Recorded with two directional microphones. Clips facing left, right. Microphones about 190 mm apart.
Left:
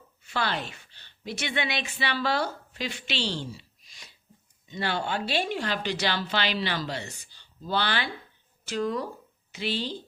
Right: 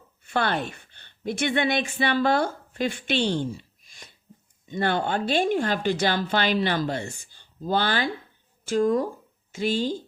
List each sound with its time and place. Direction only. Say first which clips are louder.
0.2 s a woman's voice: right 5 dB; 55° right (ahead or behind)